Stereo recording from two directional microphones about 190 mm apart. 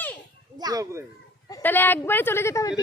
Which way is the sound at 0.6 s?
20° right (ahead or behind).